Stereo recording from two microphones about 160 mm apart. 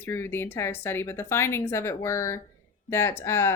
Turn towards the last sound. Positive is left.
turn(degrees=15)  # may be behind; listen again after turning